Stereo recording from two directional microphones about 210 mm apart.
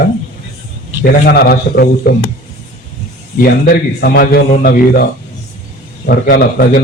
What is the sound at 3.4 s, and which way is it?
A man's voice, 45° left (ahead or behind).